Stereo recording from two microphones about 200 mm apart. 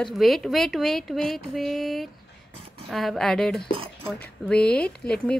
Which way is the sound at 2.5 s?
30° right (ahead or behind).